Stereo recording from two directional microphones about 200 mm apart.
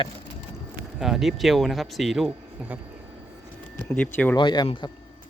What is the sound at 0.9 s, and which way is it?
Speech, centre (ahead or behind).